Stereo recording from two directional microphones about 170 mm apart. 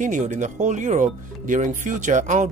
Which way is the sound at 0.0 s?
45° right (ahead or behind).